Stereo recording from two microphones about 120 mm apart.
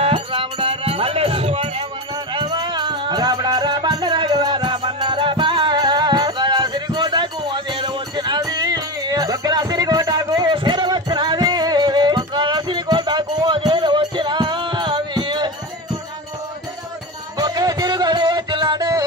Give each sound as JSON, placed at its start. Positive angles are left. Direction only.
{"t": 0.0, "sound": "music", "side_deg": -45}
{"t": 2.3, "sound": "music", "side_deg": -35}
{"t": 17.4, "sound": "music", "side_deg": -35}